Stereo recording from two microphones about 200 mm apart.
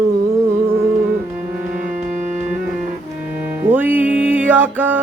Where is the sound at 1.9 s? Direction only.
35° right (ahead or behind).